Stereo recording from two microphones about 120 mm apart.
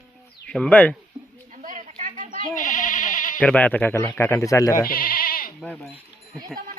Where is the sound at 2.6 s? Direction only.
90° left.